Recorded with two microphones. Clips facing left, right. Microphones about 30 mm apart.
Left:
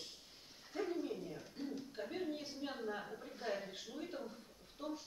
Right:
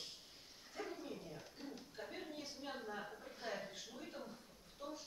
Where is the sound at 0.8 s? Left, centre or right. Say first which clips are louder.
Left 7 dB; centre.